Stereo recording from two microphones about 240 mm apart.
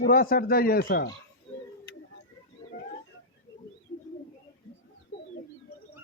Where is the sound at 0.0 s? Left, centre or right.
Left.